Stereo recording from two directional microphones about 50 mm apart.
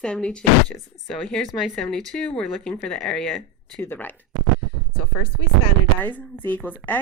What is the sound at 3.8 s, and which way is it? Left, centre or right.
Speech, left.